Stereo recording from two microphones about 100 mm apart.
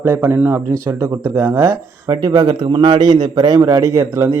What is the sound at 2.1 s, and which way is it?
A man's voice, 45° right (ahead or behind).